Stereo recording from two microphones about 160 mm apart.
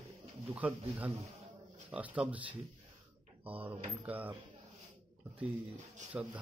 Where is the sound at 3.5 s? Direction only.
10° right (ahead or behind).